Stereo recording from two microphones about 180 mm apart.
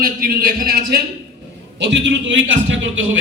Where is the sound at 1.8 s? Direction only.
75° right (ahead or behind); by 3.0 s 90° right.